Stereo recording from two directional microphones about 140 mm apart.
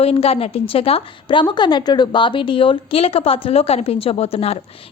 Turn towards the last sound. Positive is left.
turn(degrees=45)  # may be behind; listen again after turning